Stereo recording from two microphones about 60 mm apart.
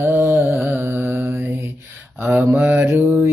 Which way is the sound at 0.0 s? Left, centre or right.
Right.